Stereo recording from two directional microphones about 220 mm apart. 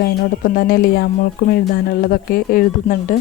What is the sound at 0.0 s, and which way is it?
Speech, 40° left (ahead or behind).